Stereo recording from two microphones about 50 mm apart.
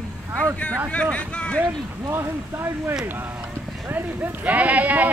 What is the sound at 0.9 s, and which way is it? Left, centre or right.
Speech, left.